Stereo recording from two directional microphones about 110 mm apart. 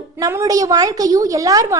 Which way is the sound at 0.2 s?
30° right (ahead or behind).